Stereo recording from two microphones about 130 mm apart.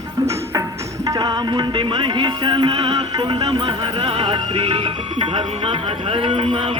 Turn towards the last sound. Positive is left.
turn(degrees=-40)  # may be behind; listen again after turning